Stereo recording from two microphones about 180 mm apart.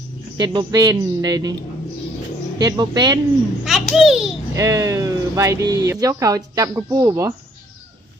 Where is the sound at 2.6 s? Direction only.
20° right (ahead or behind).